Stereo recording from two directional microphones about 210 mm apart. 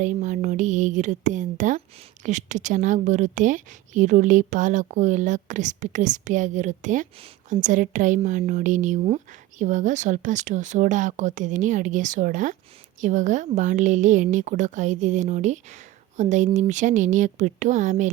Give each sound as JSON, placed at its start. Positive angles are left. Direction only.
{"t": 0.0, "sound": "a woman's voice", "side_deg": -35}